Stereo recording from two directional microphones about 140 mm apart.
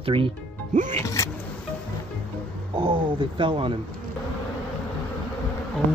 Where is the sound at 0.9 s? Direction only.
20° left (ahead or behind).